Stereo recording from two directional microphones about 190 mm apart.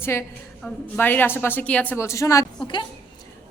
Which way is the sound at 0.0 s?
10° left (ahead or behind).